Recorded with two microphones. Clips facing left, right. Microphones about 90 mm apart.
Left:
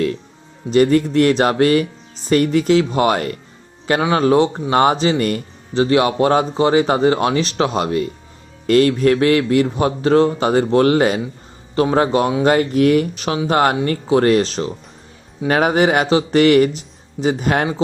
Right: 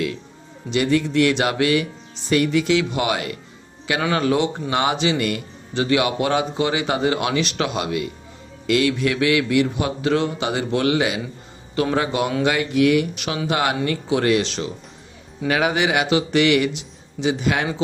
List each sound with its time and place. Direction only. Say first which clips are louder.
0.7 s speech: left 6 dB; 40° left (ahead or behind)
4.0 s speech: left 5 dB; 30° left (ahead or behind)